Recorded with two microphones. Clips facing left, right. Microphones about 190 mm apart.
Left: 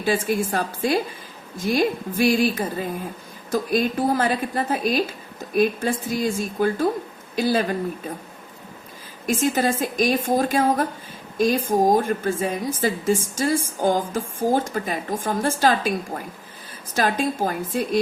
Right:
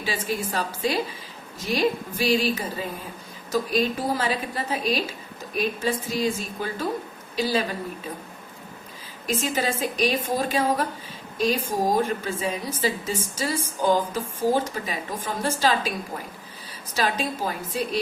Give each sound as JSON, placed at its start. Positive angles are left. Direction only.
{"t": 0.0, "sound": "a woman's voice", "side_deg": 50}
{"t": 9.2, "sound": "a woman's voice", "side_deg": 50}